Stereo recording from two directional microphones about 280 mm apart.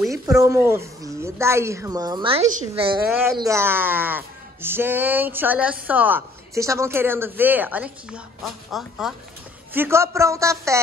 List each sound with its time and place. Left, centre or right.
0.3 s speech: centre
3.1 s speech: centre